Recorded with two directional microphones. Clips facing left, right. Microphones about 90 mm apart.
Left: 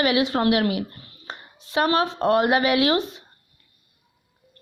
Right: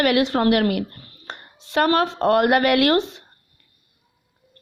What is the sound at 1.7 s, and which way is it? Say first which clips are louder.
Speech: right 2 dB; 60° right (ahead or behind).